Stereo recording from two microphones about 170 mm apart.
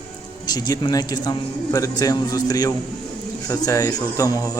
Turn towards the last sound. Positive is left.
turn(degrees=20)  # may be behind; listen again after turning